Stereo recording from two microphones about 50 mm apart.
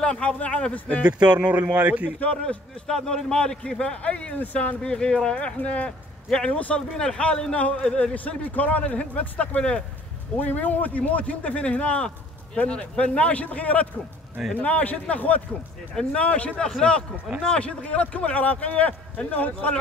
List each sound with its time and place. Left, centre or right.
0.0 s a man's voice: left
1.0 s speech: right
2.9 s a man's voice: centre; by 4.7 s left
4.8 s a man's voice: centre
5.9 s a man's voice: centre
9.6 s a man's voice: left
10.4 s a man's voice: left